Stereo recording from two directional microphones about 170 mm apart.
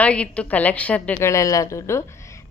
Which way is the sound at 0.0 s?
5° left (ahead or behind).